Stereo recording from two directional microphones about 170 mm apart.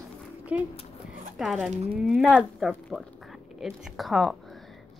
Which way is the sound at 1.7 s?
40° right (ahead or behind).